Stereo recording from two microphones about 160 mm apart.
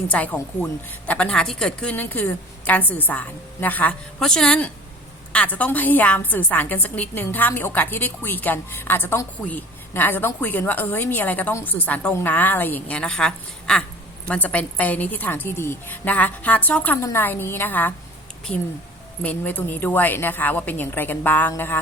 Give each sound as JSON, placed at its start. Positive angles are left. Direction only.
{"t": 0.1, "sound": "a woman's voice", "side_deg": 10}
{"t": 18.5, "sound": "speech", "side_deg": 40}
{"t": 19.2, "sound": "a woman's voice", "side_deg": 10}